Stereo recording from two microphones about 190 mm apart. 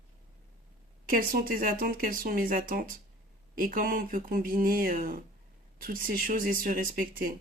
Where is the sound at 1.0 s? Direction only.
50° right (ahead or behind).